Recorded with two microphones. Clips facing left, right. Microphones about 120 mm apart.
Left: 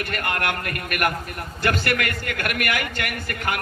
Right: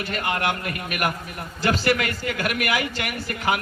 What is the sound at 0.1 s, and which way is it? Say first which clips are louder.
A man's voice: right 3 dB; 55° left (ahead or behind).